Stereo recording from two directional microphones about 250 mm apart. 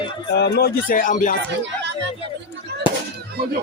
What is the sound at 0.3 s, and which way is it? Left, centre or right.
Speech, left.